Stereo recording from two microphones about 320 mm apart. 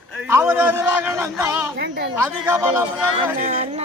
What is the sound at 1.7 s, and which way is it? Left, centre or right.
Speech, right.